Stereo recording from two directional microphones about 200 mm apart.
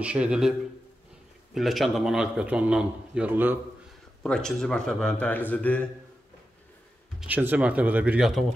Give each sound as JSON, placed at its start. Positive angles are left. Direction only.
{"t": 0.0, "sound": "speech", "side_deg": -5}
{"t": 4.2, "sound": "speech", "side_deg": 5}
{"t": 7.2, "sound": "speech", "side_deg": -10}